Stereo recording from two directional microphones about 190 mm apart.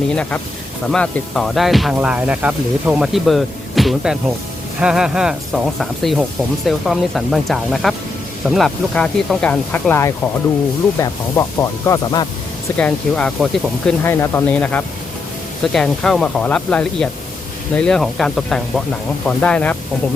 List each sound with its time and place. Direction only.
0.1 s speech: 5° left (ahead or behind)